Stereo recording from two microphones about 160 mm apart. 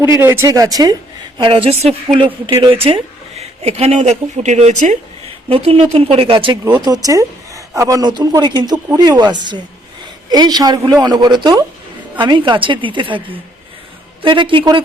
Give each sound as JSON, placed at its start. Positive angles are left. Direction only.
{"t": 0.0, "sound": "speech", "side_deg": -15}
{"t": 1.4, "sound": "a woman's voice", "side_deg": -35}
{"t": 5.5, "sound": "a woman's voice", "side_deg": -40}